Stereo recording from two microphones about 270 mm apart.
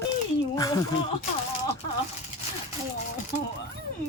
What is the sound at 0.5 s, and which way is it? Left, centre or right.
Speech, centre.